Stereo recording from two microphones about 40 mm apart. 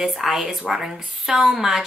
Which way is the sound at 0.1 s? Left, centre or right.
Centre.